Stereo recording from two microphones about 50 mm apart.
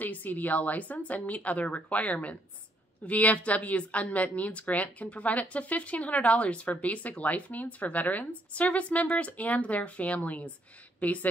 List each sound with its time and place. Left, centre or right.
0.0 s speech: left